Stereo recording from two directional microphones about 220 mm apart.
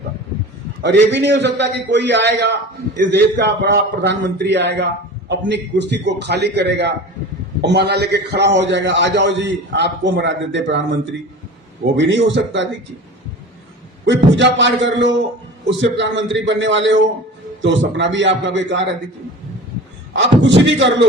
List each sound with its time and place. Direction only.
0.8 s a man's voice: 50° right (ahead or behind)
11.9 s a man's voice: 55° right (ahead or behind)
14.0 s a man's voice: 55° right (ahead or behind)
20.1 s a man's voice: 55° right (ahead or behind)